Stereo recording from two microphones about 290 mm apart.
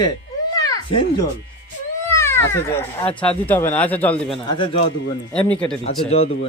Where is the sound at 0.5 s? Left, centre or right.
Centre.